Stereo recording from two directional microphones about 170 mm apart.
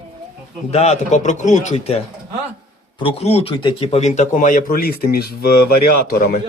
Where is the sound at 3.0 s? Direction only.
35° left (ahead or behind); by 6.3 s 60° left (ahead or behind).